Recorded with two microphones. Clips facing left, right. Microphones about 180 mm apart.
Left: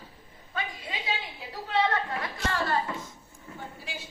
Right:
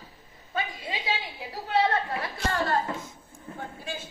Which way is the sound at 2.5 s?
45° right (ahead or behind).